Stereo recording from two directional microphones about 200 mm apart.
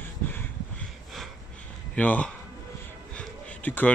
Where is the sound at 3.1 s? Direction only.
10° left (ahead or behind).